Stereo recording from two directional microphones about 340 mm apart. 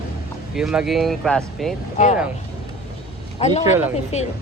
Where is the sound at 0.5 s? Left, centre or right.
Centre.